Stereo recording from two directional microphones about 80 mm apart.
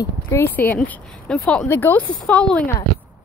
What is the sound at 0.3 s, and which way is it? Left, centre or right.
Speech, left.